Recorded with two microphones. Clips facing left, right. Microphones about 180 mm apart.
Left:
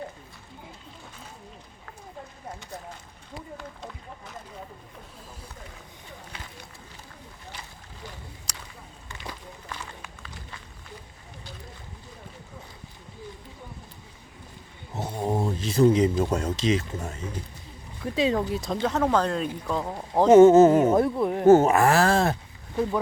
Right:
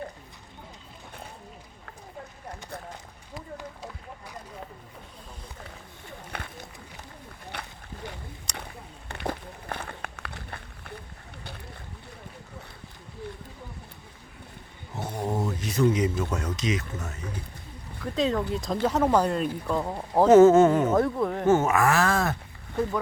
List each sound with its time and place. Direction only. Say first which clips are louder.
3.6 s a sound: even; 10° right (ahead or behind)
6.3 s run: right 8 dB; 60° right (ahead or behind)
7.5 s a sound: right 6 dB; 65° right (ahead or behind)
9.0 s run: right 8 dB; 60° right (ahead or behind)
11.4 s boat: right 2 dB; 65° right (ahead or behind)
15.3 s a sound: left 4 dB; 25° left (ahead or behind)
16.3 s speech: left 4 dB; 30° left (ahead or behind)
18.0 s speech: left 2 dB; 10° left (ahead or behind)
18.6 s speech: right 1 dB; 5° right (ahead or behind)
20.2 s speech: left 2 dB; 15° left (ahead or behind)
20.9 s speech: left 2 dB; 10° left (ahead or behind)
21.4 s speech: left 6 dB; 35° left (ahead or behind)